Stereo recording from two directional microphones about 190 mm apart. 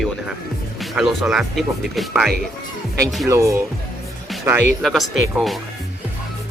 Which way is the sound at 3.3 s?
15° right (ahead or behind).